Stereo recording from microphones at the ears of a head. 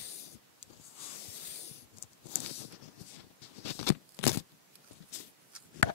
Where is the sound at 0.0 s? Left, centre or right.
Left.